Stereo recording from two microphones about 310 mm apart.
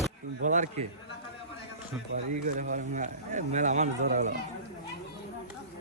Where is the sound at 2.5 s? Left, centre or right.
Right.